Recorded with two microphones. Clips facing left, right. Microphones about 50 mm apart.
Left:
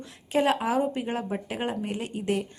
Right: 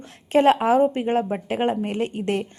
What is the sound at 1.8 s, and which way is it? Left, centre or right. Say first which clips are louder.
Speech: right 5 dB; right.